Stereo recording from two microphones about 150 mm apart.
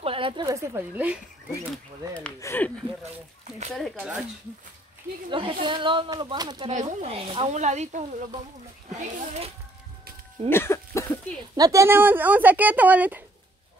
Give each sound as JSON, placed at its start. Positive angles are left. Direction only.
{"t": 0.0, "sound": "a sound", "side_deg": -35}
{"t": 0.5, "sound": "speech", "side_deg": -20}
{"t": 2.4, "sound": "speech", "side_deg": 15}
{"t": 5.3, "sound": "speech", "side_deg": -35}
{"t": 6.7, "sound": "speech", "side_deg": -55}
{"t": 7.2, "sound": "speech", "side_deg": -40}
{"t": 7.5, "sound": "speech", "side_deg": -50}
{"t": 10.5, "sound": "a sound", "side_deg": 15}
{"t": 11.5, "sound": "speech", "side_deg": -25}